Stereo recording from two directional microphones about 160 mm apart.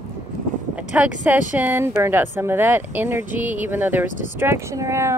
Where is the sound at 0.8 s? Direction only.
10° right (ahead or behind).